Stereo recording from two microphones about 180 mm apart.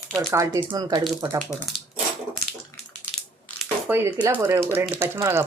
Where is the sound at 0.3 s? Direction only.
15° right (ahead or behind).